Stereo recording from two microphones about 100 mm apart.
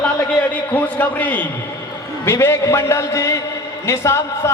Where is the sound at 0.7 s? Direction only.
15° left (ahead or behind).